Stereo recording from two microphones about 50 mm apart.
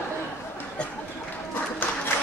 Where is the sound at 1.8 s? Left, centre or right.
Left.